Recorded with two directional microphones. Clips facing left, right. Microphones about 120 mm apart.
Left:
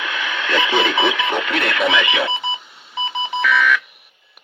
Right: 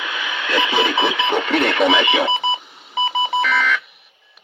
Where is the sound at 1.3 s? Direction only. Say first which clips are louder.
Right 3 dB; centre (ahead or behind).